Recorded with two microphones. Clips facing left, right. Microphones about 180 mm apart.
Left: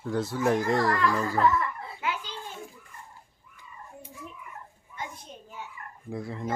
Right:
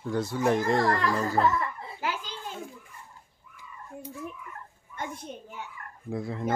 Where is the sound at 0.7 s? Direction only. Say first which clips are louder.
Even; 40° right (ahead or behind).